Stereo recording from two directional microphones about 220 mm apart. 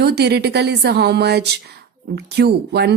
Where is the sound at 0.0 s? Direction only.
50° right (ahead or behind).